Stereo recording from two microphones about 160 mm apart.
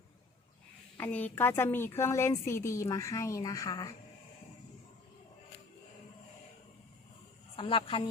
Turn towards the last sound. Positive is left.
turn(degrees=35)  # may be behind; listen again after turning